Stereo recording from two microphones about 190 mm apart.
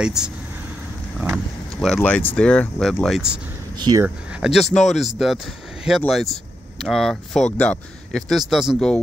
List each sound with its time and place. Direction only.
0.0 s speech: 5° right (ahead or behind)
2.0 s speech: 5° left (ahead or behind)
3.7 s speech: 20° right (ahead or behind)
4.3 s speech: centre (ahead or behind)